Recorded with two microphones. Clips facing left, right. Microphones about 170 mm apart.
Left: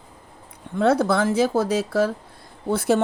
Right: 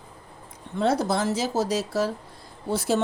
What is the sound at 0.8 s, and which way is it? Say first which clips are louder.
Speech: left 4 dB; 60° left (ahead or behind).